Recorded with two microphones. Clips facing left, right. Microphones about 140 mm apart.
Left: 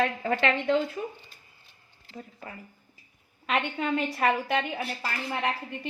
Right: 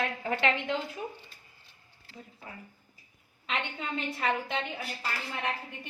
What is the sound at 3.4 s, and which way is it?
A woman's voice, 80° left.